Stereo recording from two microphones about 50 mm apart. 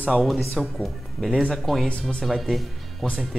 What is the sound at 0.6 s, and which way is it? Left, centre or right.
Speech, centre.